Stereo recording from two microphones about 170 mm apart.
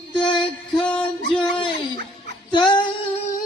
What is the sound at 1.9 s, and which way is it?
Dog, 70° right (ahead or behind).